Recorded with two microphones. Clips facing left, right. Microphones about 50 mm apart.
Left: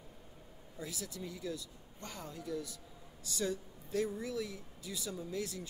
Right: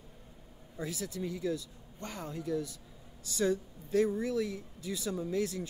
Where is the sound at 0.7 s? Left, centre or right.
Right.